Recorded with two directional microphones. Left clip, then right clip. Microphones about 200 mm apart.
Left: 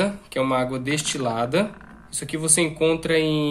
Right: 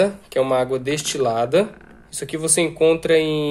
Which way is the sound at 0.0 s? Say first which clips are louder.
Right 5 dB; 25° right (ahead or behind).